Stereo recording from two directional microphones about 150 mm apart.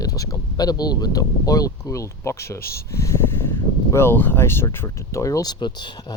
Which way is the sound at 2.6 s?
90° left.